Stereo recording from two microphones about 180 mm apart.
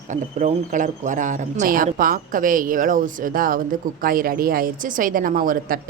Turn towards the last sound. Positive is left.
turn(degrees=-50)  # may be behind; listen again after turning